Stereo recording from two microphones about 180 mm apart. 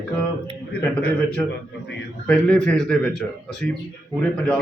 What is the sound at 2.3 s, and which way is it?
A man's voice, 5° left (ahead or behind).